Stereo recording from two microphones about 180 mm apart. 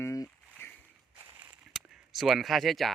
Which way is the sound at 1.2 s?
10° right (ahead or behind).